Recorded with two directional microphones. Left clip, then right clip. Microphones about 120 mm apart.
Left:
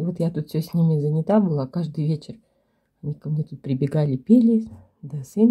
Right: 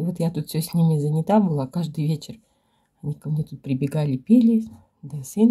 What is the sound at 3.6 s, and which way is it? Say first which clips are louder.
Speech: left 2 dB; 20° left (ahead or behind).